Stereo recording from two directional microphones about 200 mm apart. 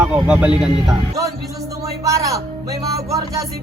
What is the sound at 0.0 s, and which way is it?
Speech, 5° right (ahead or behind).